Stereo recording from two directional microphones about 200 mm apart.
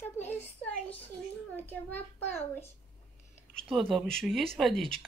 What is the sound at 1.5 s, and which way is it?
A child's voice, 10° left (ahead or behind).